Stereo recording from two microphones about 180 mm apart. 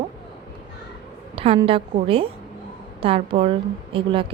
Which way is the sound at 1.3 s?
30° right (ahead or behind).